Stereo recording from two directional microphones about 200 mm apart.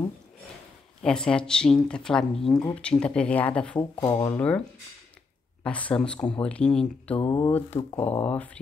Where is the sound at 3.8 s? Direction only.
25° left (ahead or behind).